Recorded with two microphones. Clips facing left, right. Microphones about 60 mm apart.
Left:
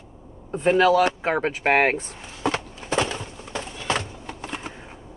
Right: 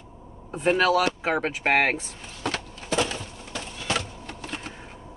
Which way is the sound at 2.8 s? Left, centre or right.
Left.